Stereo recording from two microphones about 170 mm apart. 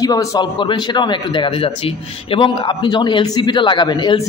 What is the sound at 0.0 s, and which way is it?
A man's voice, 20° left (ahead or behind).